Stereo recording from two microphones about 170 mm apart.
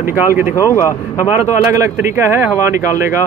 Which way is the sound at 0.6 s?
15° left (ahead or behind).